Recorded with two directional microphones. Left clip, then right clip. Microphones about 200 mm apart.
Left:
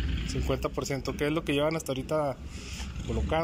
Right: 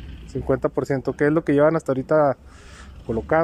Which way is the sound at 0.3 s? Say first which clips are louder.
Right 10 dB; 45° right (ahead or behind).